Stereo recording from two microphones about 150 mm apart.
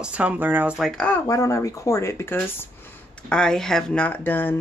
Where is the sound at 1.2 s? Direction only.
20° left (ahead or behind).